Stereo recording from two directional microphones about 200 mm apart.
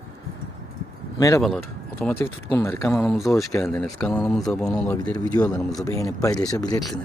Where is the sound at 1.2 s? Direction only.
15° left (ahead or behind).